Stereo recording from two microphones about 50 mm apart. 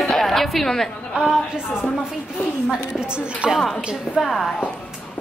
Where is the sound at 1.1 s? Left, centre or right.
Centre.